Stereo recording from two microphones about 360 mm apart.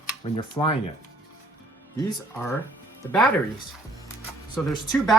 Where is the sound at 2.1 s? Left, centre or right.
Centre.